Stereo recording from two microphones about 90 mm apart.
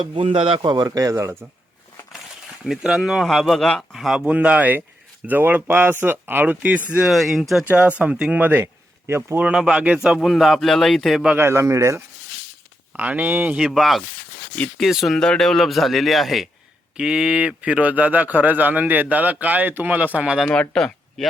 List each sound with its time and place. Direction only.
0.0 s a man's voice: 75° right (ahead or behind)
0.9 s speech: 40° right (ahead or behind)
2.6 s speech: 5° right (ahead or behind)
4.3 s a man's voice: 15° right (ahead or behind)
7.1 s speech: centre (ahead or behind)
7.7 s speech: 15° right (ahead or behind)
9.4 s a man's voice: 10° right (ahead or behind)
10.2 s speech: centre (ahead or behind)
11.3 s speech: 30° right (ahead or behind)
13.0 s a man's voice: 15° right (ahead or behind)
13.6 s a man's voice: 5° right (ahead or behind)
20.5 s speech: 10° left (ahead or behind)